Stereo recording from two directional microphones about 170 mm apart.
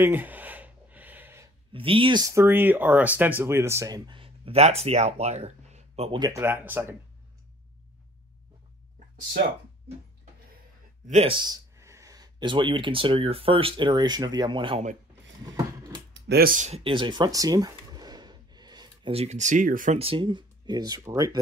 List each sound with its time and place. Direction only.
0.0 s gasp: 10° right (ahead or behind)
1.7 s speech: 30° right (ahead or behind)
6.1 s speech: 20° right (ahead or behind)
11.1 s speech: 40° right (ahead or behind)
11.3 s speech: 25° right (ahead or behind)
15.4 s a sound: 20° right (ahead or behind)
16.1 s speech: 70° right (ahead or behind); by 20.0 s 50° right (ahead or behind)
20.0 s speech: 30° right (ahead or behind)